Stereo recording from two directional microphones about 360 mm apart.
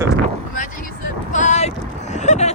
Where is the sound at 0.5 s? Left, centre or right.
Left.